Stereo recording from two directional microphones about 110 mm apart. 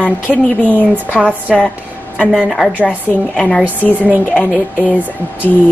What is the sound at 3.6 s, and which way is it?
Speech, 15° left (ahead or behind).